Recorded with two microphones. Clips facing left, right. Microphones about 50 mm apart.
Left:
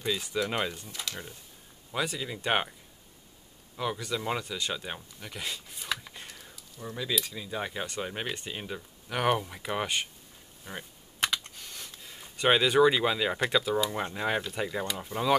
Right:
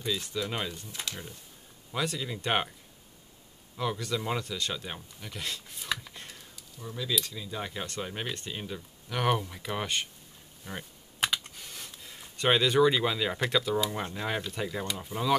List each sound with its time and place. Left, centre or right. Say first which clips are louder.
0.0 s speech: left 2 dB; centre
1.9 s speech: even; centre
3.7 s speech: even; centre
7.0 s speech: even; centre
10.6 s computer keyboard: right 1 dB; centre
14.0 s speech: left 3 dB; centre